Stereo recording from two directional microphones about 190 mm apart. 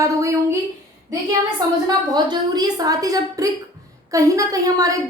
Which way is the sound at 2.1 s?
20° right (ahead or behind).